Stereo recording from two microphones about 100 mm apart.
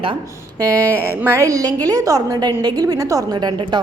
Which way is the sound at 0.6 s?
25° right (ahead or behind).